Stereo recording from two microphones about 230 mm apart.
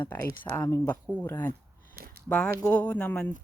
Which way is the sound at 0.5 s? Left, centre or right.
Centre.